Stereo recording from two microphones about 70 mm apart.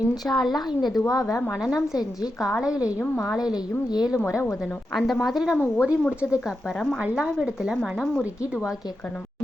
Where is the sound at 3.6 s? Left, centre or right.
Left.